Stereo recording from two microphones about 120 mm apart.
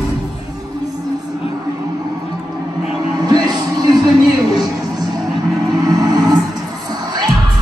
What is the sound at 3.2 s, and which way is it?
Music, 35° right (ahead or behind).